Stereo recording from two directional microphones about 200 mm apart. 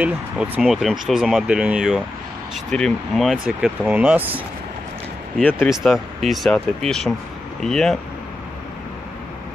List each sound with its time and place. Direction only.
0.0 s speech: 5° right (ahead or behind)
5.4 s speech: 5° left (ahead or behind)